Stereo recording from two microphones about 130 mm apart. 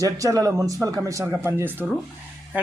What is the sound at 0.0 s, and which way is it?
A man's voice, 25° right (ahead or behind).